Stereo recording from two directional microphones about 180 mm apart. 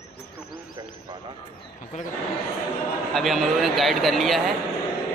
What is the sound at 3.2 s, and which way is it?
A man's voice, centre (ahead or behind).